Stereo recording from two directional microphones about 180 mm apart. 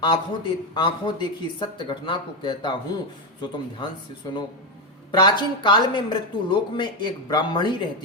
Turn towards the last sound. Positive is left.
turn(degrees=25)  # may be behind; listen again after turning